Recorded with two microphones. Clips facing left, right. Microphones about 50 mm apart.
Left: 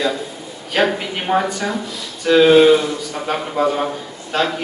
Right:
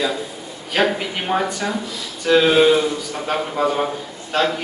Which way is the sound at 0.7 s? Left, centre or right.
Centre.